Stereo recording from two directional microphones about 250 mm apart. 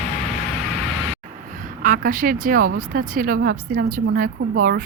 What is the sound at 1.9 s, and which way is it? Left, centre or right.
A woman's voice, right.